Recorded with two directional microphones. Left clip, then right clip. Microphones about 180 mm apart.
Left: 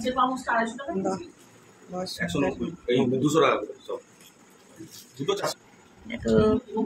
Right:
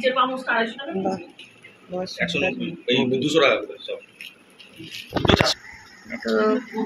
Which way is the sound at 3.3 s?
50° left (ahead or behind).